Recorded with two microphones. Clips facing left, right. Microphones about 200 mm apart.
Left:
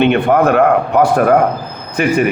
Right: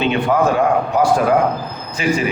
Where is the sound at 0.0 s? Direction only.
60° left (ahead or behind).